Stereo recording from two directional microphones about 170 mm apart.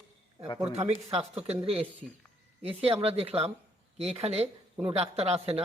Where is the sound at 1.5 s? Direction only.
35° right (ahead or behind).